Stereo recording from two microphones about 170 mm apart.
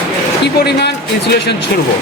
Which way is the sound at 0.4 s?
80° left.